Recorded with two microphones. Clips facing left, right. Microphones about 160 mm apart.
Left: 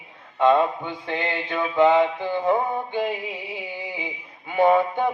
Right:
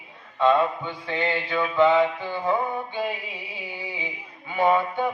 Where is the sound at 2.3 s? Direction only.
50° left (ahead or behind).